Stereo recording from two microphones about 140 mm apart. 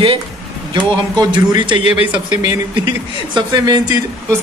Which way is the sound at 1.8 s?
50° left (ahead or behind).